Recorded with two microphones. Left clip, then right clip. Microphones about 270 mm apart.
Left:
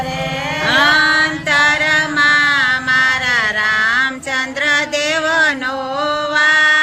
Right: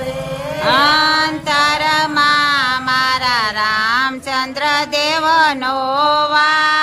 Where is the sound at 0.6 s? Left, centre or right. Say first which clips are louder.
Even; centre.